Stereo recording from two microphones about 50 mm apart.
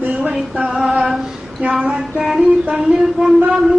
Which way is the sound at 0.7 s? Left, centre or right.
Centre.